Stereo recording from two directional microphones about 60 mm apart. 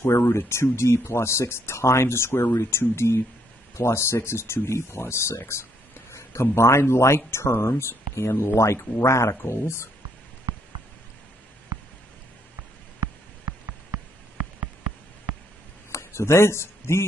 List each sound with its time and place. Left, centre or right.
0.0 s speech: left
15.9 s speech: left